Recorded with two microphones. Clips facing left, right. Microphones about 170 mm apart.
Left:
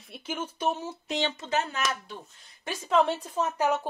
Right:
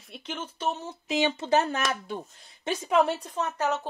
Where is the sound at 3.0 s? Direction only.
Centre (ahead or behind).